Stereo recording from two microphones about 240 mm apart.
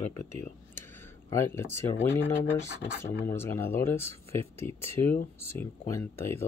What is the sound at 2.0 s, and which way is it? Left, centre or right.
Speech, centre.